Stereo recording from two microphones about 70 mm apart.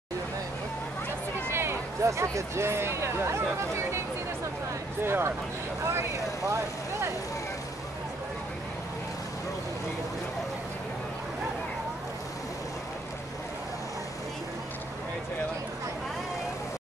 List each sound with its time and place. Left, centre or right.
1.5 s speech: right
5.0 s speech: right